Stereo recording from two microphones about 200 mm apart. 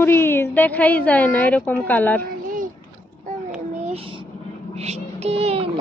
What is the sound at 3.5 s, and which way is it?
Child singing, 35° right (ahead or behind).